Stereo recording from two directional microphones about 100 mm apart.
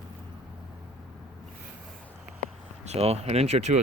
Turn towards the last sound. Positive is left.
turn(degrees=-90)